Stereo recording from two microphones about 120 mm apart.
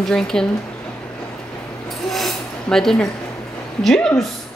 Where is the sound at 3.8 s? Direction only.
5° left (ahead or behind).